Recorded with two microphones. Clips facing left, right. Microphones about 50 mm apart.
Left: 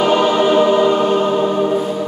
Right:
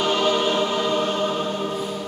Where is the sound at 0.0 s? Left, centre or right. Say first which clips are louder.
Left 7 dB; left.